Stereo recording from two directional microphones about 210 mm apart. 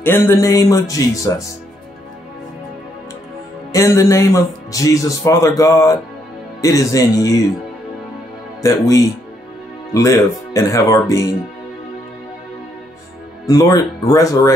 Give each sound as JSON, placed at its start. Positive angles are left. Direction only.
{"t": 0.0, "sound": "speech", "side_deg": 10}
{"t": 3.7, "sound": "speech", "side_deg": 15}
{"t": 8.6, "sound": "speech", "side_deg": 15}
{"t": 13.5, "sound": "speech", "side_deg": 15}